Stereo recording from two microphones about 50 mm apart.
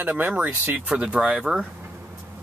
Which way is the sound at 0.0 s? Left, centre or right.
Right.